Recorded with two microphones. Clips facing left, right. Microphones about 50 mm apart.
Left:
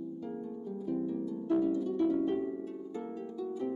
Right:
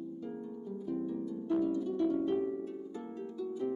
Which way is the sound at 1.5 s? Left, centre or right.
Left.